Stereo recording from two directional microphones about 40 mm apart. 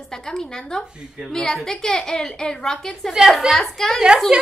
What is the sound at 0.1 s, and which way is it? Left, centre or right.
Speech, centre.